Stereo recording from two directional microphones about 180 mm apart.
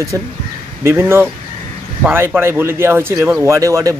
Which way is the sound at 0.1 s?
15° right (ahead or behind).